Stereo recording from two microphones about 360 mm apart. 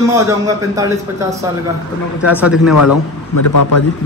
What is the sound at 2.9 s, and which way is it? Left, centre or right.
Speech, left.